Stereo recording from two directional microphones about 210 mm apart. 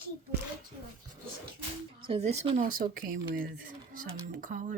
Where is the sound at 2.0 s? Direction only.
25° right (ahead or behind).